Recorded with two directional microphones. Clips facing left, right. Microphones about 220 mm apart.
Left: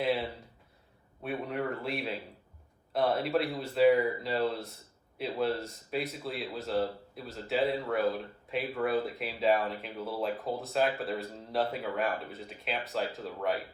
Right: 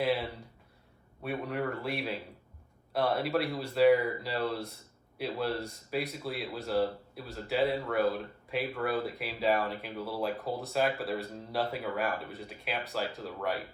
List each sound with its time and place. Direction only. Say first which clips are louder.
0.0 s speech: even; centre (ahead or behind)